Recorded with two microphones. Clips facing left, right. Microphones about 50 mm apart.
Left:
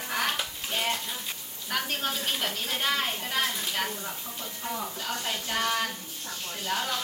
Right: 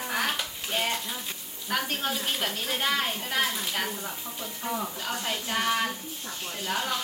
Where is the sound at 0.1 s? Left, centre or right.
Centre.